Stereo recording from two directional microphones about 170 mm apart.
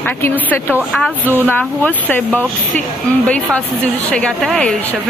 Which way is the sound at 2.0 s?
10° left (ahead or behind).